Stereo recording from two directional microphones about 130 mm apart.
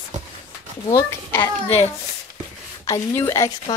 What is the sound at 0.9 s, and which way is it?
Speech, 20° left (ahead or behind).